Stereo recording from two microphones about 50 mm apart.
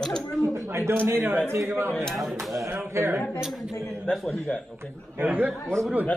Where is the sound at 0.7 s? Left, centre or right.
Right.